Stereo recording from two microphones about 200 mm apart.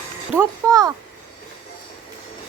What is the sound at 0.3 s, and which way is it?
Speech, 15° right (ahead or behind).